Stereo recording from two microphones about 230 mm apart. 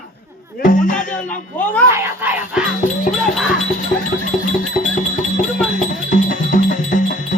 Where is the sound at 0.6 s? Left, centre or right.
Left.